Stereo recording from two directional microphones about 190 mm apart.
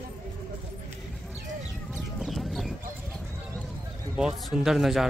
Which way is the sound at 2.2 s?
Centre (ahead or behind).